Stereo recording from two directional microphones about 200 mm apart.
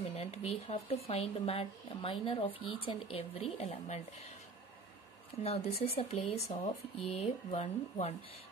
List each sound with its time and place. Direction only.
0.0 s speech: 30° left (ahead or behind)
5.4 s speech: 30° left (ahead or behind)